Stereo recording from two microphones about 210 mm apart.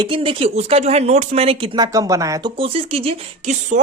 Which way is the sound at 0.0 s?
25° right (ahead or behind).